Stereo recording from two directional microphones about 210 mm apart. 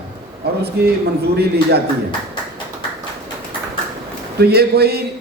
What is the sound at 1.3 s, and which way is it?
Speech, 50° right (ahead or behind).